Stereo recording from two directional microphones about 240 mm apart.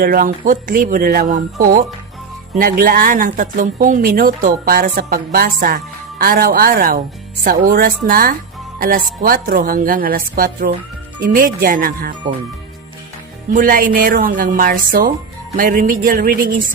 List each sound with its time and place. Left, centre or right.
0.0 s speech: right
2.6 s speech: right
13.5 s speech: right